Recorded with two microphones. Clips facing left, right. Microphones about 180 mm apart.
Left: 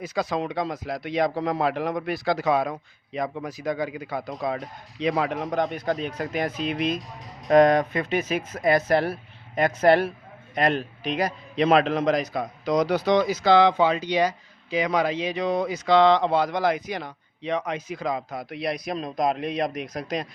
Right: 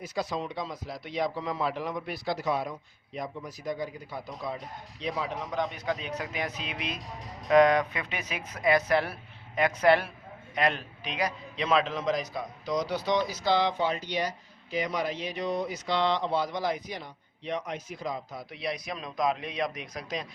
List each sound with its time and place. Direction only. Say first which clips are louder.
0.0 s a man's voice: left 5 dB; 85° left; by 18.9 s 65° left (ahead or behind)
18.9 s speech: left 3 dB; 40° left (ahead or behind)
19.9 s speech: left 6 dB; 60° left (ahead or behind)